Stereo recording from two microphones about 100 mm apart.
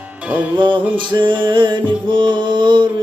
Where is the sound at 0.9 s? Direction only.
55° right (ahead or behind).